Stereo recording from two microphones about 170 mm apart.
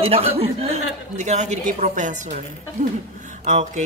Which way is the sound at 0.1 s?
35° right (ahead or behind).